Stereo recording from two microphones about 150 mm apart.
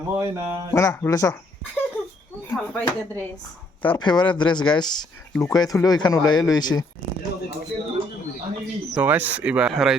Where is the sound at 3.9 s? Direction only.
30° left (ahead or behind).